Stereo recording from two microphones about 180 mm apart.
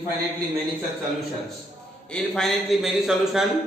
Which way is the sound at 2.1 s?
Centre (ahead or behind).